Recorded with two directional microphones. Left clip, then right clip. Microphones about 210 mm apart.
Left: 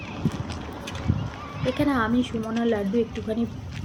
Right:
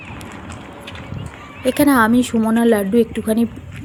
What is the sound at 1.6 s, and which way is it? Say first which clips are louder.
A woman's voice: right 10 dB; 55° right (ahead or behind).